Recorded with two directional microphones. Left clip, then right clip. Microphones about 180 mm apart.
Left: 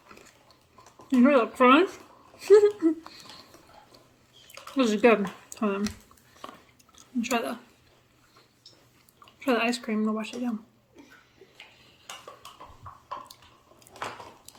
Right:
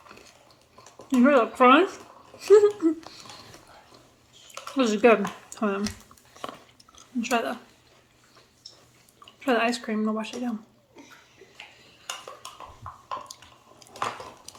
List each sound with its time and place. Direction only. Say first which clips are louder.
1.1 s speech: right 1 dB; 20° left (ahead or behind)
4.8 s speech: right 2 dB; 20° left (ahead or behind)
6.9 s chewing: right 2 dB; 20° left (ahead or behind)
9.2 s speech: right 2 dB; 20° left (ahead or behind)